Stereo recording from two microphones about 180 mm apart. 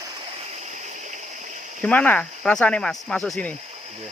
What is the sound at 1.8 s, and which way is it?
Speech, 5° left (ahead or behind).